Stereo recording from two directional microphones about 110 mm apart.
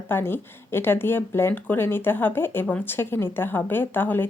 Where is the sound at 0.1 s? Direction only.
20° left (ahead or behind).